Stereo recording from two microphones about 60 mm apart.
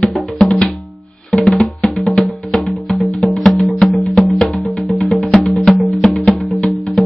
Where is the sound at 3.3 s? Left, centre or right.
Centre.